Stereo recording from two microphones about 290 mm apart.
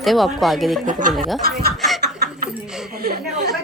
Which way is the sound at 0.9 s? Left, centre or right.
Right.